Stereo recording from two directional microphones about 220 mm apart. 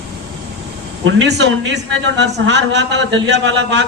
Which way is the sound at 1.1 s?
55° right (ahead or behind).